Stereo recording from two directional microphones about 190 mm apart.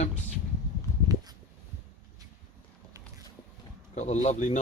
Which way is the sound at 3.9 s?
40° left (ahead or behind).